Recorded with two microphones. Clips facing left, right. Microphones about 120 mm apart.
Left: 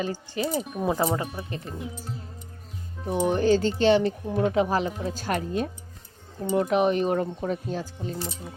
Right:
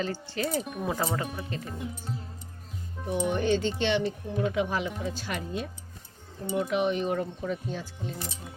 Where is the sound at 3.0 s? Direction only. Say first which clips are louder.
Left 4 dB; 35° left (ahead or behind).